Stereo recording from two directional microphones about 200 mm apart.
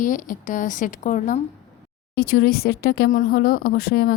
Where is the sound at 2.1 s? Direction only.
50° left (ahead or behind).